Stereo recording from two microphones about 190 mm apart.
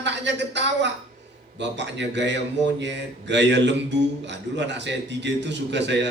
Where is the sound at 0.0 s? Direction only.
65° right (ahead or behind).